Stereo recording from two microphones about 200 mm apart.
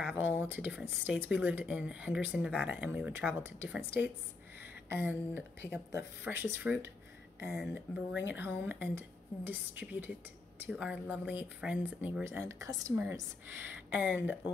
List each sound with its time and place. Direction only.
0.1 s speech: 10° right (ahead or behind)